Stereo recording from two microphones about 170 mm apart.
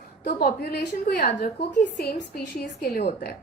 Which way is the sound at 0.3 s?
65° left (ahead or behind).